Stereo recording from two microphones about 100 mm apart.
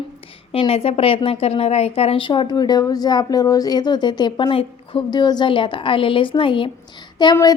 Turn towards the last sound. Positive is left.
turn(degrees=45)  # may be behind; listen again after turning